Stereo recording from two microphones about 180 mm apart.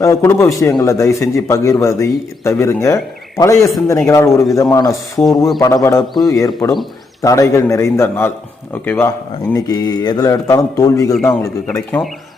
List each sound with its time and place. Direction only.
0.0 s speech: 15° left (ahead or behind)
11.1 s a man's voice: centre (ahead or behind)
11.4 s speech: 15° left (ahead or behind)